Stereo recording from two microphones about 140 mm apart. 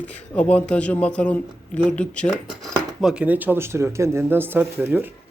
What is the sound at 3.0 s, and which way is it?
Speech, 5° right (ahead or behind).